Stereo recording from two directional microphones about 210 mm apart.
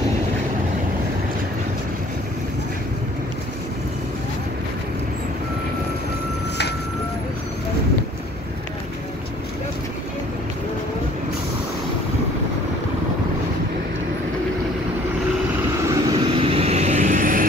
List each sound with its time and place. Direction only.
15.9 s vehicle: 25° right (ahead or behind); by 17.5 s 40° right (ahead or behind)